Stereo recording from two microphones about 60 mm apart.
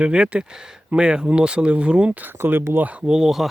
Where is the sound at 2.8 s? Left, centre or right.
Right.